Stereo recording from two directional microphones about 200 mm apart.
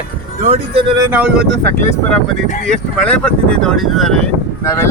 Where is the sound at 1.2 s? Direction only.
5° right (ahead or behind).